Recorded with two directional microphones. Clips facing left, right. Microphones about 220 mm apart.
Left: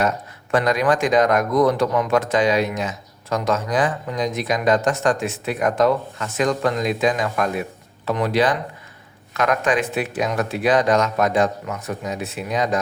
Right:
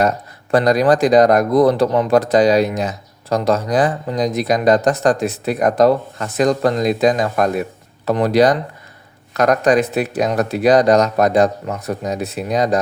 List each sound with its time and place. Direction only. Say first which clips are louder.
0.5 s speech: right 5 dB; 35° right (ahead or behind)